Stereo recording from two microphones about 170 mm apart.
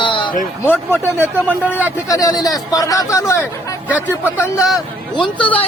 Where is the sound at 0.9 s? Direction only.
15° right (ahead or behind).